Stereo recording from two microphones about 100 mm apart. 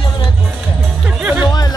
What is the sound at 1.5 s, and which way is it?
Chatter, 40° left (ahead or behind).